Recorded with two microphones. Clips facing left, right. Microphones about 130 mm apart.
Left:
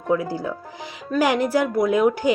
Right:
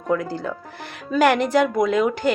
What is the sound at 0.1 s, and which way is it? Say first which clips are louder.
Speech: left 1 dB; 10° left (ahead or behind).